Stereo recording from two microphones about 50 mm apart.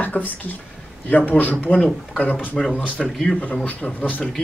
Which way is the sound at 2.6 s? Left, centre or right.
Centre.